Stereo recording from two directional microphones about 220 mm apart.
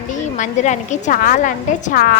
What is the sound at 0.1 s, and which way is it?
A woman's voice, 35° left (ahead or behind).